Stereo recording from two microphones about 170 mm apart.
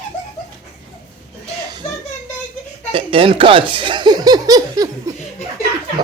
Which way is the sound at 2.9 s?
30° right (ahead or behind).